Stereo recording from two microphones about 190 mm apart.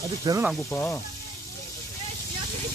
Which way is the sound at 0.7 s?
15° left (ahead or behind).